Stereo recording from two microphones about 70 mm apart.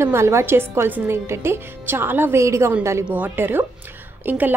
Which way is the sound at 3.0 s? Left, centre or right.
Right.